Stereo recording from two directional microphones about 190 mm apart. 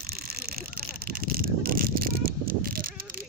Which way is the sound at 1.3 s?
50° right (ahead or behind).